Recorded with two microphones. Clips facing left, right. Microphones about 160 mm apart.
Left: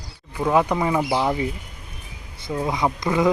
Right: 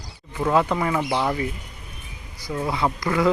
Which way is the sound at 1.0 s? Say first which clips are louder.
Left 2 dB; 5° left (ahead or behind).